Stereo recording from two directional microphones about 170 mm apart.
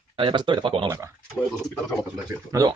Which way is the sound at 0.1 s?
30° right (ahead or behind).